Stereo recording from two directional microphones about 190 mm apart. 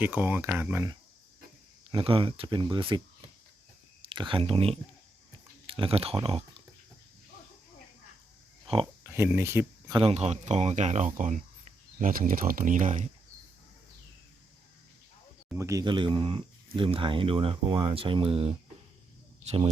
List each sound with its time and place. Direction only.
0.0 s speech: 10° right (ahead or behind)
1.9 s speech: 25° right (ahead or behind)
8.6 s speech: 30° right (ahead or behind)
9.0 s speech: 10° right (ahead or behind)
10.0 s speech: 35° right (ahead or behind)
15.5 s speech: 15° right (ahead or behind); by 19.7 s 35° right (ahead or behind)